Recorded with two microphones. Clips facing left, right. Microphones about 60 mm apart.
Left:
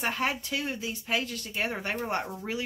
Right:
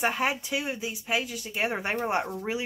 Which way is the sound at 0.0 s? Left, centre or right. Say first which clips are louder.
Right 3 dB; centre.